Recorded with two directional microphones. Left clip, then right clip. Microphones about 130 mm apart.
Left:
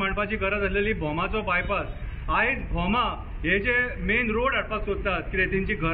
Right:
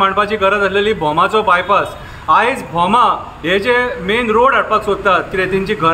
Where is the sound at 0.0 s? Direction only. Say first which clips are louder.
Right 14 dB; 35° right (ahead or behind).